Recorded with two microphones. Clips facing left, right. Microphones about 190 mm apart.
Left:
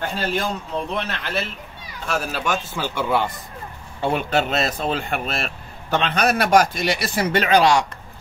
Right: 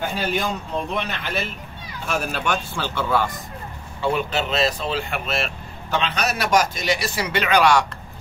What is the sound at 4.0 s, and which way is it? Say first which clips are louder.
Speech: left 2 dB; 50° left (ahead or behind).